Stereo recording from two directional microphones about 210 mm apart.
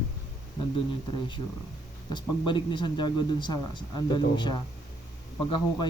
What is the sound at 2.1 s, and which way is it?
A man's voice, 20° left (ahead or behind).